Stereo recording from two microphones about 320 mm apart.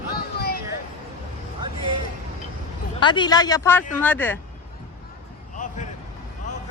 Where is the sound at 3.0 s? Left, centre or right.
Centre.